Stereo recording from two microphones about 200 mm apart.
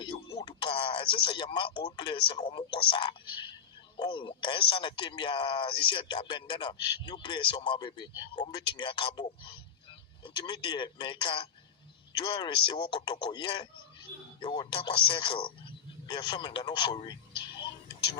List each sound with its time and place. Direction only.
0.0 s a man's voice: 25° left (ahead or behind)